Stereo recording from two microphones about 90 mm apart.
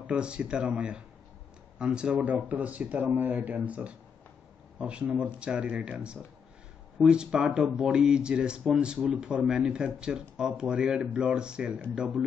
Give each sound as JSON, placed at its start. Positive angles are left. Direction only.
{"t": 0.0, "sound": "speech", "side_deg": -10}